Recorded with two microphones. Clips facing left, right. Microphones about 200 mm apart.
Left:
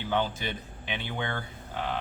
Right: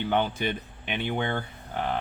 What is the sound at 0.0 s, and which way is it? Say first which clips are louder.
Speech: right 3 dB; 60° right (ahead or behind).